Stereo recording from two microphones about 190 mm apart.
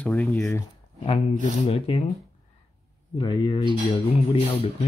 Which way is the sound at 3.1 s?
25° left (ahead or behind).